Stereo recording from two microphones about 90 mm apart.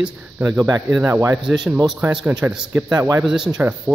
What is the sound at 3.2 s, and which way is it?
Speech, 5° right (ahead or behind).